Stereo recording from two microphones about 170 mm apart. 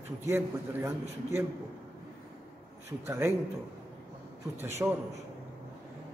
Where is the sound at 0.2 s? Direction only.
15° right (ahead or behind).